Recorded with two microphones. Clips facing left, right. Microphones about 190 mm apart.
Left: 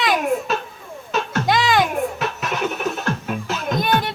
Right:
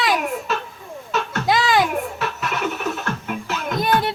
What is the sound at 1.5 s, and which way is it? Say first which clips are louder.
Music: even; centre (ahead or behind).